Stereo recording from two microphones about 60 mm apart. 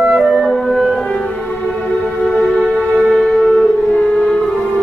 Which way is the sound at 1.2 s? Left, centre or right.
Left.